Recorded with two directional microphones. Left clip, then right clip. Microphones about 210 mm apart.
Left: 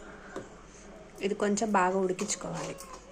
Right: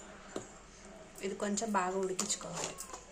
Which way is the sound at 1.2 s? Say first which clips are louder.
Left 8 dB; 20° left (ahead or behind).